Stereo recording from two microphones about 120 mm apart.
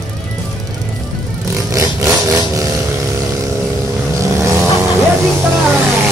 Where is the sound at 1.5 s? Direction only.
25° right (ahead or behind).